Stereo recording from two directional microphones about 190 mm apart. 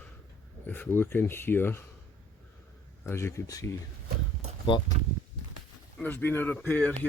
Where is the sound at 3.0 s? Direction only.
15° left (ahead or behind).